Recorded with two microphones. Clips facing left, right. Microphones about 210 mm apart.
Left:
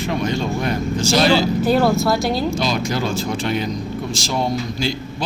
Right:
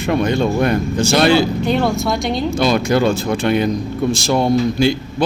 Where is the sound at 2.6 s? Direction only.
60° right (ahead or behind).